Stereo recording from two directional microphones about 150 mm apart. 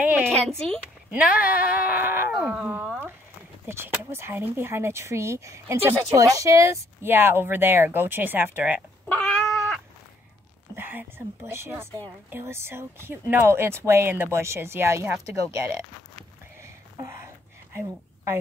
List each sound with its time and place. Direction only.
0.0 s a sound: 10° right (ahead or behind)
1.1 s speech: 10° right (ahead or behind)
9.1 s cat: 5° left (ahead or behind)
10.8 s speech: 15° right (ahead or behind)
16.9 s a sound: 20° right (ahead or behind)
17.7 s a woman's voice: 15° right (ahead or behind)